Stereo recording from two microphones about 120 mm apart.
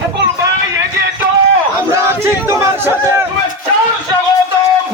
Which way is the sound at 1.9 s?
20° right (ahead or behind).